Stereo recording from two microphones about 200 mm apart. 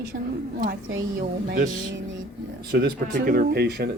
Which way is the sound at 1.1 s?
45° right (ahead or behind).